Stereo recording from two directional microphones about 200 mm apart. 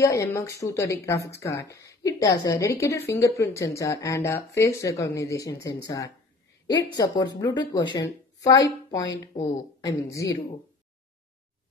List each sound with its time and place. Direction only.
0.0 s a woman's voice: 15° left (ahead or behind)